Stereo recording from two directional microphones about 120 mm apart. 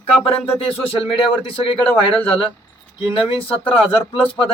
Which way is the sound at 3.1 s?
50° left (ahead or behind).